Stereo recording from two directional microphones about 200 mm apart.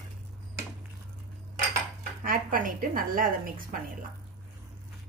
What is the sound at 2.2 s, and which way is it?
A woman's voice, 45° right (ahead or behind).